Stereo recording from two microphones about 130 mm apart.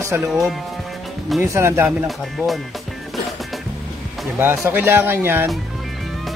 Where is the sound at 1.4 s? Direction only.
20° right (ahead or behind).